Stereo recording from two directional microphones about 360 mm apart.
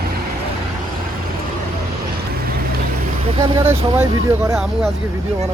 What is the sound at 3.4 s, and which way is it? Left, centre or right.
Speech, centre.